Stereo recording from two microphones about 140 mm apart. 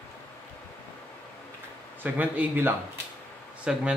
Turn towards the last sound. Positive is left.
turn(degrees=-5)  # may be behind; listen again after turning